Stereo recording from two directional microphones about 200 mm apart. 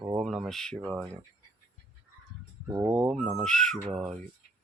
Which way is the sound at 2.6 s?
15° right (ahead or behind).